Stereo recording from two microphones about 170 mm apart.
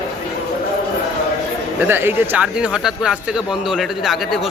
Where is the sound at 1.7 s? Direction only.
15° right (ahead or behind).